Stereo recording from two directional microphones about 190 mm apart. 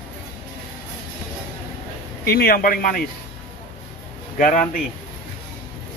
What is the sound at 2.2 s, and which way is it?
Speech, 55° left (ahead or behind).